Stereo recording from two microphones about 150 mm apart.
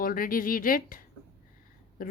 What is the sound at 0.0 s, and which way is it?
A child's voice, 70° left (ahead or behind).